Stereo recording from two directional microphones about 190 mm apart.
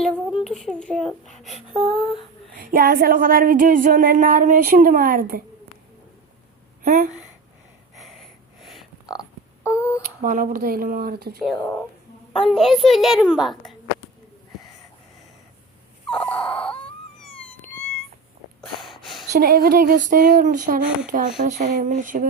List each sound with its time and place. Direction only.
0.0 s child singing: 5° left (ahead or behind)
0.4 s a woman's voice: centre (ahead or behind)
2.6 s speech: 50° right (ahead or behind)
6.8 s speech: 45° right (ahead or behind)
7.9 s a sound: centre (ahead or behind)
9.6 s a sound: 15° left (ahead or behind)
10.2 s speech: 45° right (ahead or behind)
11.4 s a woman's voice: centre (ahead or behind)
16.0 s wail: 5° left (ahead or behind)
17.2 s a sound: 5° left (ahead or behind)
18.6 s snort: centre (ahead or behind)
19.3 s speech: 55° right (ahead or behind)